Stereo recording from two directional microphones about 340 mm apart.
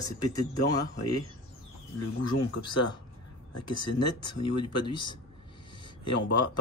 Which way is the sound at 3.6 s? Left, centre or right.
Left.